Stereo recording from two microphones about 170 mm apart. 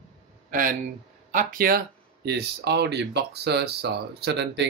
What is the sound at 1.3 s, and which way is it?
Speech, 55° right (ahead or behind).